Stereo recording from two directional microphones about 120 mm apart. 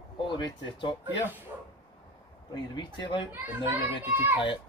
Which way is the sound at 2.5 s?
40° left (ahead or behind).